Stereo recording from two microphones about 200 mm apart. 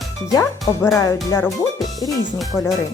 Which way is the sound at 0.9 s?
15° left (ahead or behind).